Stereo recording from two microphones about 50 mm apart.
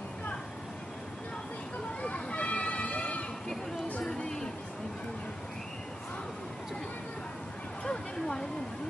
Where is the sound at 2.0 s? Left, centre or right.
Left.